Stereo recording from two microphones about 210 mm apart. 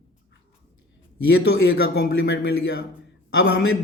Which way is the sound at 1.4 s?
50° left (ahead or behind).